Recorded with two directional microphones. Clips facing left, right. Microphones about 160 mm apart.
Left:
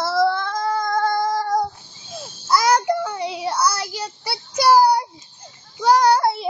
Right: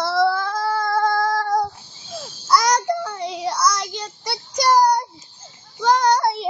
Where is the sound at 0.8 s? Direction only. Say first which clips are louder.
Right 2 dB; 5° right (ahead or behind).